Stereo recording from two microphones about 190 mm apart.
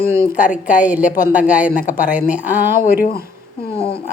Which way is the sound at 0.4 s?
40° left (ahead or behind).